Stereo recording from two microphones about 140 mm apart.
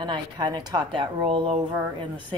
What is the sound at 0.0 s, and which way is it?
A woman's voice, 30° right (ahead or behind).